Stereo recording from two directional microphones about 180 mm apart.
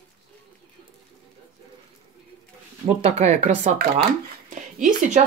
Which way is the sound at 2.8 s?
35° right (ahead or behind).